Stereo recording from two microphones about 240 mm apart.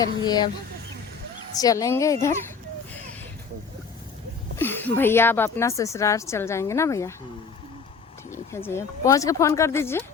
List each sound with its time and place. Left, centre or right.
0.0 s a woman's voice: centre
1.5 s a woman's voice: centre
4.5 s a woman's voice: centre
8.3 s a woman's voice: centre